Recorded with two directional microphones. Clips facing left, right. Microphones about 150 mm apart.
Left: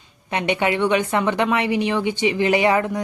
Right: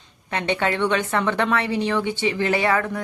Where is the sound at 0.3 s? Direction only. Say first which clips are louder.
Left 2 dB; 15° left (ahead or behind).